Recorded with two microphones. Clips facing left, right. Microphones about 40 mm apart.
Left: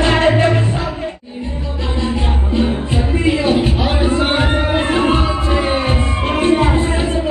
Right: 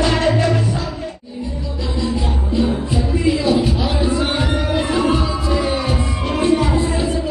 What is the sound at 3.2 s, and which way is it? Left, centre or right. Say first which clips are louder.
Music: left 1 dB; left.